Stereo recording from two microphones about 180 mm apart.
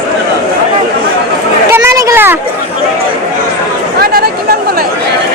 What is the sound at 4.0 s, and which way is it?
Chatter, 60° right (ahead or behind).